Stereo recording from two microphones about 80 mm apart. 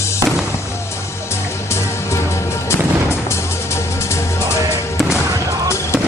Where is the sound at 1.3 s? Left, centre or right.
Left.